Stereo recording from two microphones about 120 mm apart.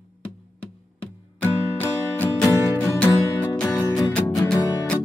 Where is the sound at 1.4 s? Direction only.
15° left (ahead or behind).